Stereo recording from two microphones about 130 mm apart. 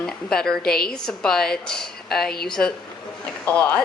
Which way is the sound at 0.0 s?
5° left (ahead or behind).